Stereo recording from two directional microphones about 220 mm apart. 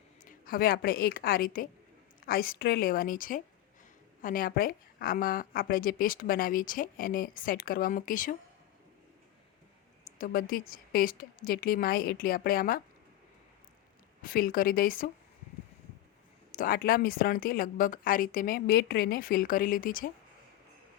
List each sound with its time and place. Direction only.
0.3 s a woman's voice: 40° left (ahead or behind)
10.2 s a woman's voice: 40° left (ahead or behind)
14.2 s a woman's voice: 40° left (ahead or behind)
16.6 s a woman's voice: 40° left (ahead or behind)